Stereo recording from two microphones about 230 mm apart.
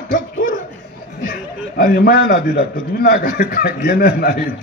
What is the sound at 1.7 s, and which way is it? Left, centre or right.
A man's voice, left.